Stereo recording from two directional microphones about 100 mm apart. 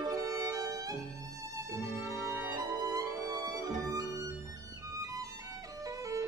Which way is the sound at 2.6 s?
35° right (ahead or behind).